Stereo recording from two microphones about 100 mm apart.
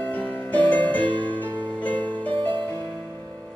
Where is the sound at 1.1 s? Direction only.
55° right (ahead or behind).